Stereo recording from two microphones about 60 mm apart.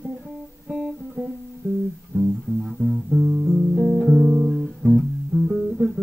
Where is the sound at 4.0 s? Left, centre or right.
Centre.